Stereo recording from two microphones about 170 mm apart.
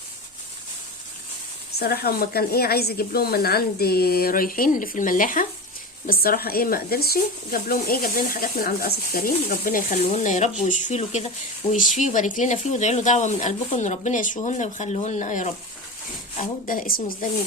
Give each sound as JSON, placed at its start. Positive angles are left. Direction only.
{"t": 1.8, "sound": "speech", "side_deg": 65}
{"t": 9.9, "sound": "speech", "side_deg": 40}